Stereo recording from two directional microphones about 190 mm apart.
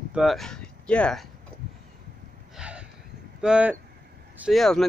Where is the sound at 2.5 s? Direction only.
5° right (ahead or behind).